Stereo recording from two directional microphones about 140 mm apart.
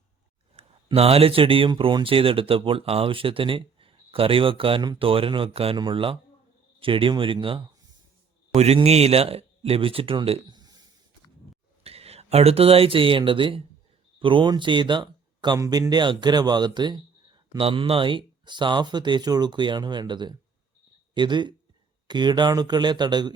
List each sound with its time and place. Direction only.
0.5 s speech: 45° right (ahead or behind)
11.8 s speech: 45° right (ahead or behind)
17.6 s speech: 40° right (ahead or behind)